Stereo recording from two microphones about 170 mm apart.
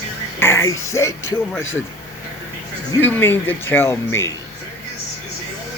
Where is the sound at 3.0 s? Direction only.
10° left (ahead or behind).